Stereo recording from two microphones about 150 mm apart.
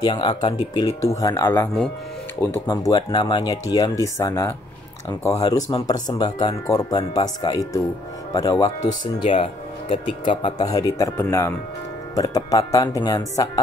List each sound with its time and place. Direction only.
0.0 s speech: 30° left (ahead or behind); by 2.7 s 15° left (ahead or behind)
2.7 s speech: 25° left (ahead or behind)